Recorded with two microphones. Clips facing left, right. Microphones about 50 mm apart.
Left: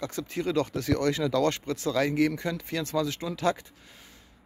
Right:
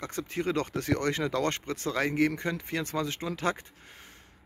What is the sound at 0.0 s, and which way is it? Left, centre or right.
Speech, right.